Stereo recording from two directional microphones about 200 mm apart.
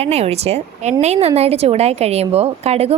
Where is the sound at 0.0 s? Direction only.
30° right (ahead or behind).